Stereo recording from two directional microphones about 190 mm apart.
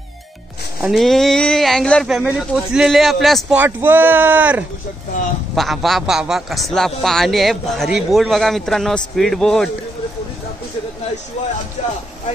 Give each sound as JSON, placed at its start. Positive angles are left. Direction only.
{"t": 0.7, "sound": "a man's voice", "side_deg": 0}
{"t": 11.8, "sound": "speech", "side_deg": 35}